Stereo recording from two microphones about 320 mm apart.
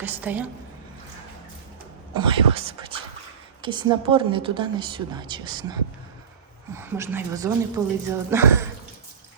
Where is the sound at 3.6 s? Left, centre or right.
Centre.